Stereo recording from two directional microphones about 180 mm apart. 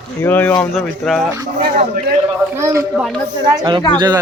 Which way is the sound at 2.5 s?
15° right (ahead or behind).